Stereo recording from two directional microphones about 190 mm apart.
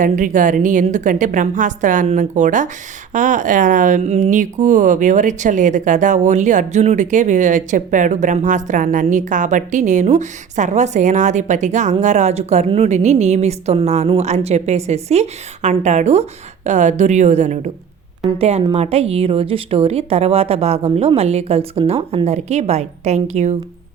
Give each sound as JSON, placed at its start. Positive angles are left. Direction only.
{"t": 0.0, "sound": "a woman's voice", "side_deg": -45}